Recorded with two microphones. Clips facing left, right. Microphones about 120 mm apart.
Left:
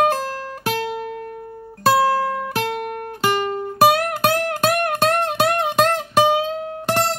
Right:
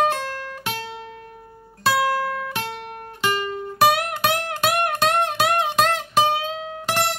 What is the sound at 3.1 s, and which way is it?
Music, 40° left (ahead or behind).